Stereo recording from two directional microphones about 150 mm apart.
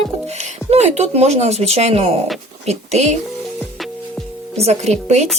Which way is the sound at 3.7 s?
Centre (ahead or behind).